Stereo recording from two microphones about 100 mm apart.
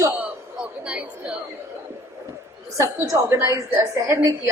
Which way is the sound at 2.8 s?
30° right (ahead or behind).